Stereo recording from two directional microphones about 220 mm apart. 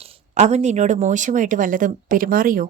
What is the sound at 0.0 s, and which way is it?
A woman's voice, 30° right (ahead or behind).